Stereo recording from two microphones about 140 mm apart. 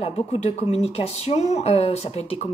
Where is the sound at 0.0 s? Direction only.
45° left (ahead or behind).